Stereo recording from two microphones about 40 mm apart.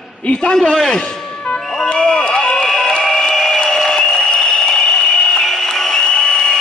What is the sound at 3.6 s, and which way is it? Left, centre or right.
Applause, centre.